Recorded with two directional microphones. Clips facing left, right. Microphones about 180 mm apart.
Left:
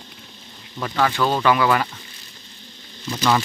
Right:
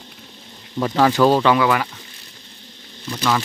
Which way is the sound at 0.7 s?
25° right (ahead or behind).